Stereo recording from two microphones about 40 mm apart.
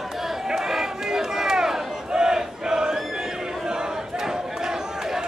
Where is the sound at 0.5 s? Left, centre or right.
Centre.